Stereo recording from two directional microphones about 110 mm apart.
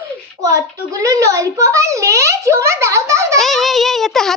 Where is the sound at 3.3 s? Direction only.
Centre (ahead or behind).